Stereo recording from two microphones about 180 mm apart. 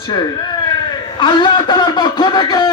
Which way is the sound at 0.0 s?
25° left (ahead or behind).